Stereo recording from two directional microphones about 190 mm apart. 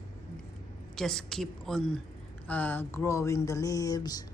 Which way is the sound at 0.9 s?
Centre (ahead or behind).